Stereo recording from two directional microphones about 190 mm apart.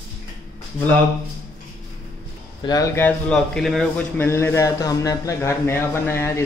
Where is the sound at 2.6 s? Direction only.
20° left (ahead or behind).